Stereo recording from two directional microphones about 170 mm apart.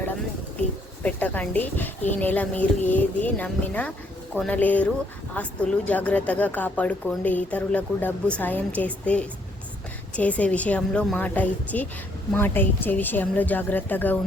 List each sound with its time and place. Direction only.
1.0 s a woman's voice: 10° left (ahead or behind)